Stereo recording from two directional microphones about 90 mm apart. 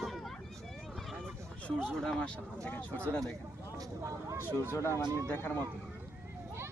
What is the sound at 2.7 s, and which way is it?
Speech, 15° left (ahead or behind).